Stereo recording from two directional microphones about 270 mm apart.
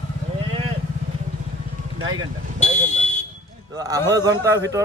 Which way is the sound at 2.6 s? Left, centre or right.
Left.